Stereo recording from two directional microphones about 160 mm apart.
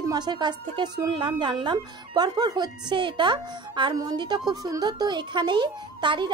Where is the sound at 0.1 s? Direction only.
25° right (ahead or behind).